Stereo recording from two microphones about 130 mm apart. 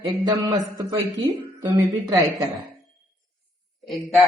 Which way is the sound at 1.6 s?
30° right (ahead or behind).